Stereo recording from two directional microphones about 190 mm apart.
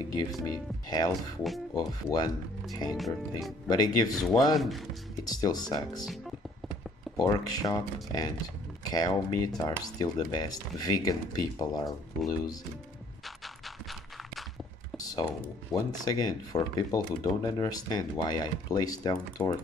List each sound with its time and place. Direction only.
0.1 s speech: 20° left (ahead or behind)
1.4 s music: centre (ahead or behind)
2.0 s speech: 20° left (ahead or behind)
4.2 s music: centre (ahead or behind)
5.2 s speech: 20° left (ahead or behind)
7.2 s speech: 20° left (ahead or behind)
13.8 s a sound: centre (ahead or behind)
15.0 s computer keyboard: 20° left (ahead or behind)
15.7 s speech: 20° left (ahead or behind)